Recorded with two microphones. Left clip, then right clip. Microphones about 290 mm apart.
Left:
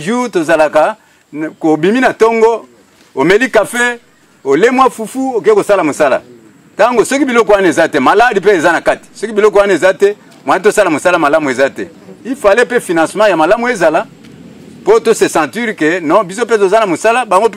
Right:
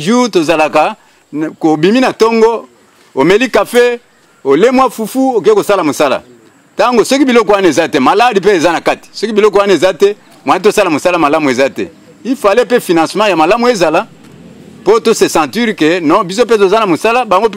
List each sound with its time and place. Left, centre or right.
0.0 s speech: left